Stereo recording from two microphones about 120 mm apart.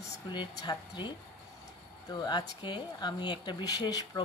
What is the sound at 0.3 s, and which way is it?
Speech, 35° left (ahead or behind).